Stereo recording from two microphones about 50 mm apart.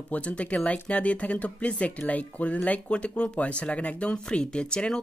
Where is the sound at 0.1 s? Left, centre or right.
Left.